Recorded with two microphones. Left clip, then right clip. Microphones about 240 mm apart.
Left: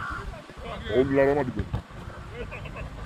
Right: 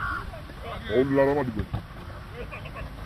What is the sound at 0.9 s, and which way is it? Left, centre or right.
Speech, right.